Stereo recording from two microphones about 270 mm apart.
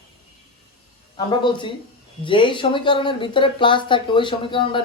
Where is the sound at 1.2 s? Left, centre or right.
Centre.